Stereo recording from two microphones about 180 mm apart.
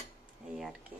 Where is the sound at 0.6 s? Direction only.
Centre (ahead or behind).